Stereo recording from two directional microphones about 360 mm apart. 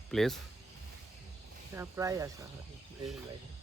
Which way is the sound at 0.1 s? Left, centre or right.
Centre.